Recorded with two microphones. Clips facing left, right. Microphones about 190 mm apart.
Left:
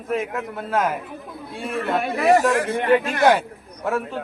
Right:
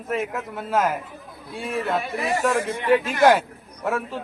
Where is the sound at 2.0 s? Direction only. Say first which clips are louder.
Left 6 dB; 65° left (ahead or behind).